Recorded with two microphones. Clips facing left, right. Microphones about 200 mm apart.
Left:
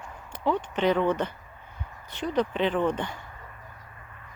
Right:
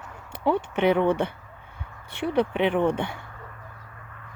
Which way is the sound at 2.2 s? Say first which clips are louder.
Right 3 dB; 60° right (ahead or behind).